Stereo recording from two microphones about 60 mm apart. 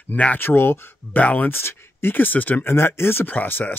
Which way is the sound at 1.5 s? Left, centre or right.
Left.